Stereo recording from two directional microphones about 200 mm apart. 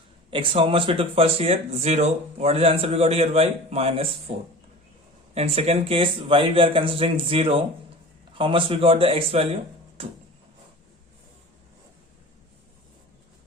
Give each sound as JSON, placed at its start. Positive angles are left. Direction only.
{"t": 0.3, "sound": "speech", "side_deg": -25}